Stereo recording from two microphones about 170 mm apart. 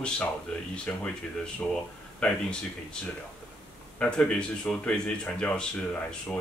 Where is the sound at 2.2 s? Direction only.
5° left (ahead or behind).